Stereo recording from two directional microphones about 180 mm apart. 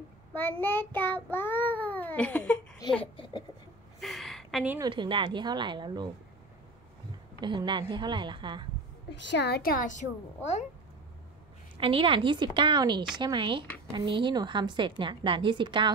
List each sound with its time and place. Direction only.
0.3 s child singing: 10° left (ahead or behind)
3.0 s speech: 30° left (ahead or behind)
4.0 s a sound: centre (ahead or behind)
4.8 s a woman's voice: 25° right (ahead or behind)
7.3 s a woman's voice: 25° right (ahead or behind)
9.1 s a woman's voice: 80° left; by 10.6 s 40° left (ahead or behind)
11.8 s a woman's voice: 30° right (ahead or behind)